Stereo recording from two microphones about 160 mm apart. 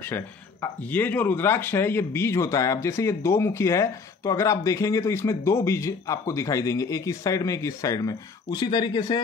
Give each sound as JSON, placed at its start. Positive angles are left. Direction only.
{"t": 0.0, "sound": "speech", "side_deg": 15}